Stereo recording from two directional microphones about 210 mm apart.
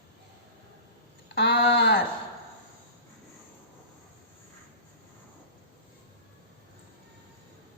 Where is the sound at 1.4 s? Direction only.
45° left (ahead or behind).